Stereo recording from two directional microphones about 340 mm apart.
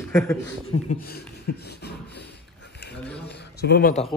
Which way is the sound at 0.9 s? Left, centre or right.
Left.